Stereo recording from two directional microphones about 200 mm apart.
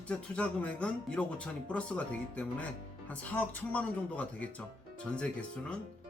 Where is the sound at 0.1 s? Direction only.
5° left (ahead or behind).